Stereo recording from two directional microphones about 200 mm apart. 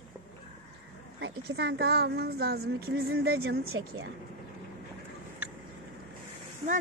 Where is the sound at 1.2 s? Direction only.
60° right (ahead or behind).